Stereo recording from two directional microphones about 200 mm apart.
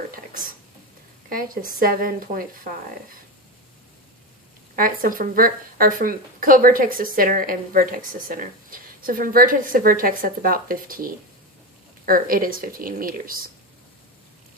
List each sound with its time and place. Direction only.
1.3 s speech: 45° right (ahead or behind)
4.8 s speech: 45° right (ahead or behind)